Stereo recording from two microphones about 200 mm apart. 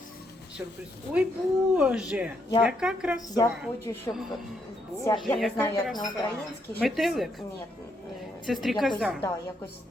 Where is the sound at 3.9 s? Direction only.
20° left (ahead or behind).